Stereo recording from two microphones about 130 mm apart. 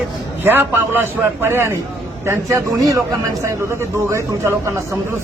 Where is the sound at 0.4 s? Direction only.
15° right (ahead or behind).